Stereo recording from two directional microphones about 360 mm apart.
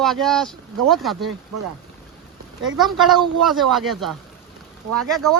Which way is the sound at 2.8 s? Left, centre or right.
Centre.